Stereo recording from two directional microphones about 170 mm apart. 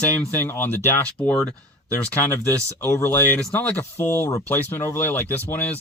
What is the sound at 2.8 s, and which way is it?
Speech, 15° left (ahead or behind).